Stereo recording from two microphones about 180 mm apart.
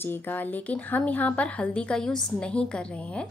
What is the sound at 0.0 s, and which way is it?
Speech, 10° left (ahead or behind).